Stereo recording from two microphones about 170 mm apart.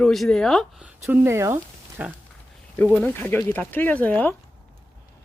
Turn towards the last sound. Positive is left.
turn(degrees=10)  # may be behind; listen again after turning